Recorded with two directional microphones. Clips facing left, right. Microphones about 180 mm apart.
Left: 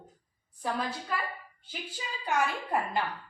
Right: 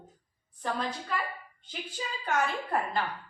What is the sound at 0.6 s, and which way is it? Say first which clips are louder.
Speech: even; 10° left (ahead or behind).